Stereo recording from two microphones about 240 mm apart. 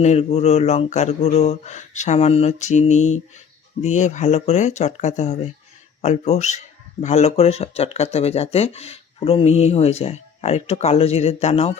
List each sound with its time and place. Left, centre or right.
0.0 s speech: left